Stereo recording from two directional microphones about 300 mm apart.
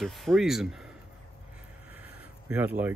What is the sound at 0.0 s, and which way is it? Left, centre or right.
Speech, centre.